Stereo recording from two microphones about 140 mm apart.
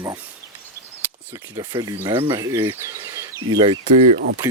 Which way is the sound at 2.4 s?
25° right (ahead or behind).